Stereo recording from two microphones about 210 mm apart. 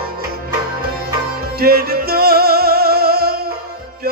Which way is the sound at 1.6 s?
45° right (ahead or behind).